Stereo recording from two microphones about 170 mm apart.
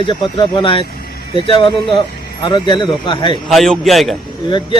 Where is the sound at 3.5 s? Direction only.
Centre (ahead or behind).